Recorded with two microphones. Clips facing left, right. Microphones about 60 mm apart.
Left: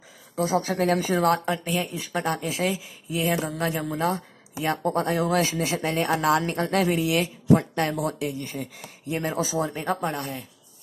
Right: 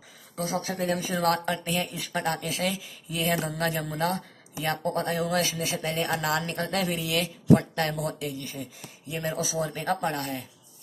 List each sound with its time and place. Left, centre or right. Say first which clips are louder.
0.4 s speech: left 6 dB; left
0.7 s speech: left 5 dB; left
1.2 s speech: left 3 dB; centre
4.6 s speech: left 3 dB; left
8.5 s speech: left 4 dB; left
9.1 s speech: left 4 dB; left
9.7 s speech: left 1 dB; centre